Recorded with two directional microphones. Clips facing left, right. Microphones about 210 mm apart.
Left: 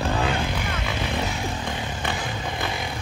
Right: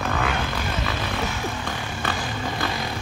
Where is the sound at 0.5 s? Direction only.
20° left (ahead or behind).